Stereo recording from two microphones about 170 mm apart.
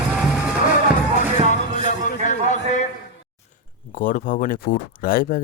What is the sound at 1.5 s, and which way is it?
Music, 45° left (ahead or behind).